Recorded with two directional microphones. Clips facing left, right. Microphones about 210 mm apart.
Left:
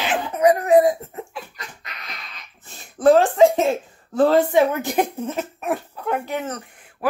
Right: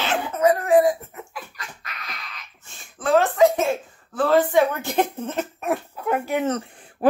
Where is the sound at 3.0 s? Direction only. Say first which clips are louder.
Left 4 dB; 35° left (ahead or behind).